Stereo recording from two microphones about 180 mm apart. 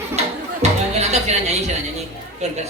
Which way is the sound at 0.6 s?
40° right (ahead or behind).